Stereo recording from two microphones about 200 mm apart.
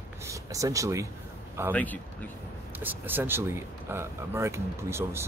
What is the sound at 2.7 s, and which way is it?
Speech, 10° right (ahead or behind).